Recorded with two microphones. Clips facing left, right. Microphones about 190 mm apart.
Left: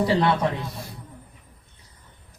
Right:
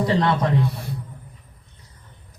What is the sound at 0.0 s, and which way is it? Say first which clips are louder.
Speech: even; 10° left (ahead or behind).